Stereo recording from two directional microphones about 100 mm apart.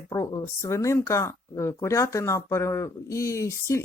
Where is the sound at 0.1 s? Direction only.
35° left (ahead or behind).